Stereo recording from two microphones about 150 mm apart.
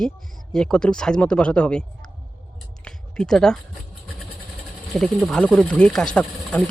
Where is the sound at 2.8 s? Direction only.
5° left (ahead or behind).